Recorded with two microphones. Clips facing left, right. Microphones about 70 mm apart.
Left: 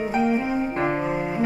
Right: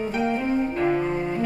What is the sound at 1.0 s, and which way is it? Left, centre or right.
Cello, centre.